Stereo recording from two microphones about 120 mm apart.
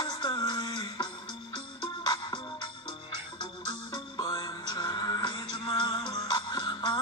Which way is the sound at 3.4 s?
35° left (ahead or behind).